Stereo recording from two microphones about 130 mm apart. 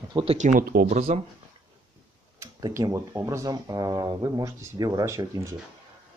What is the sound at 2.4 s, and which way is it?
Speech, 25° right (ahead or behind).